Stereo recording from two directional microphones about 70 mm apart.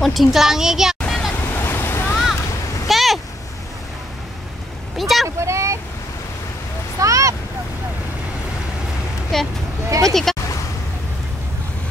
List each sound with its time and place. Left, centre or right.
0.0 s a child's voice: centre
1.0 s a sound: centre
1.5 s waves: left
2.9 s a sound: centre
4.9 s vehicle: centre
5.4 s vehicle: right
7.0 s vehicle: right
9.3 s vehicle: centre
10.0 s a sound: centre